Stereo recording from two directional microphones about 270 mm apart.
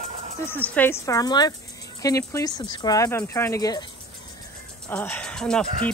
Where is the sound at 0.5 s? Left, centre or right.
Centre.